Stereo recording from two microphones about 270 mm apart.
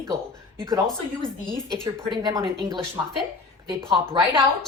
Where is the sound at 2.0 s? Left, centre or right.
Centre.